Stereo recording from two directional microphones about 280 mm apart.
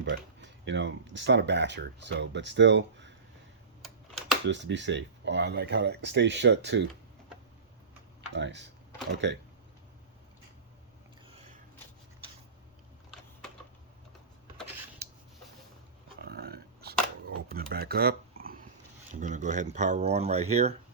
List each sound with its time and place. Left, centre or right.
0.0 s speech: right
3.8 s computer keyboard: centre
4.4 s speech: right
8.4 s speech: right
15.0 s a sound: right
16.2 s a sound: right
19.2 s speech: right